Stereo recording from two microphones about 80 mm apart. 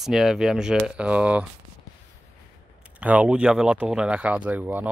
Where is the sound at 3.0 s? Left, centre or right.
Centre.